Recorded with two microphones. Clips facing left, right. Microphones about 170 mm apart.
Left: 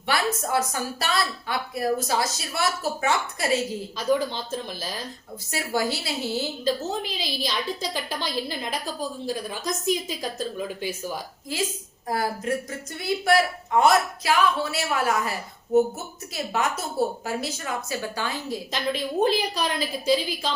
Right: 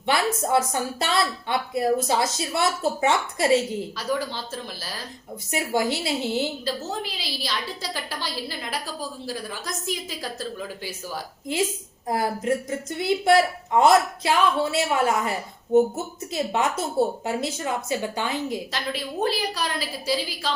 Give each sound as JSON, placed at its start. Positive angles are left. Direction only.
{"t": 0.1, "sound": "a woman's voice", "side_deg": -25}
{"t": 3.9, "sound": "a woman's voice", "side_deg": 20}
{"t": 5.5, "sound": "a woman's voice", "side_deg": -20}
{"t": 6.7, "sound": "a woman's voice", "side_deg": 20}
{"t": 12.0, "sound": "a woman's voice", "side_deg": -20}
{"t": 19.2, "sound": "a woman's voice", "side_deg": 20}